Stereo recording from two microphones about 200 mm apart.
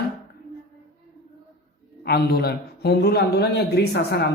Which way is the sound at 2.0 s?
55° left (ahead or behind).